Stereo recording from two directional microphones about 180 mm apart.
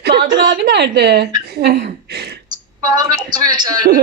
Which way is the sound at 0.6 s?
65° right (ahead or behind).